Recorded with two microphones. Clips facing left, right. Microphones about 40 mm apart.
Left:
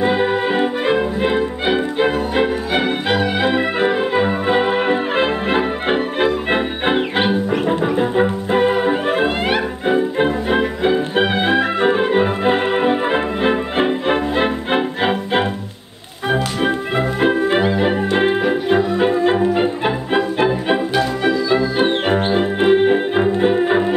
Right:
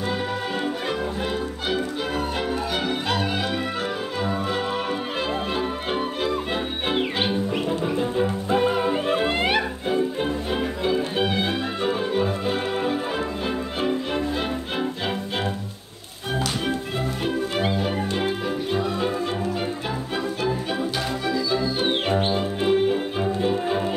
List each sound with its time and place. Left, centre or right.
0.0 s music: left
19.1 s music: left